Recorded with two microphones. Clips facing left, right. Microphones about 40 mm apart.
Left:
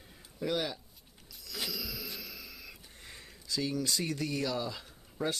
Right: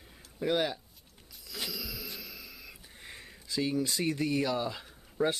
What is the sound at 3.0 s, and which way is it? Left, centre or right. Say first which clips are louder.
Speech: right 5 dB; centre.